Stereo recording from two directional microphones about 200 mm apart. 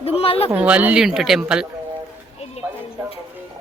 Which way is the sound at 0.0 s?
30° left (ahead or behind).